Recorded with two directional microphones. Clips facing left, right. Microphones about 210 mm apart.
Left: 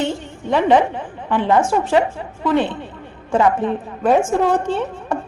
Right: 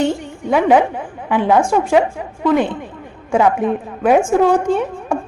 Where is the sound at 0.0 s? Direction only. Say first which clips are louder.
Right 4 dB; 15° right (ahead or behind).